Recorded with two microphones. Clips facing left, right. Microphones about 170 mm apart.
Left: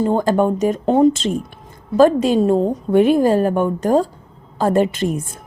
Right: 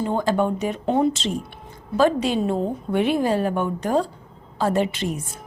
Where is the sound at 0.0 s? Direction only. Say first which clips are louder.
Left 5 dB; 45° left (ahead or behind).